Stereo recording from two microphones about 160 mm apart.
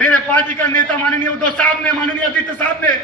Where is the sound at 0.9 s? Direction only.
10° left (ahead or behind).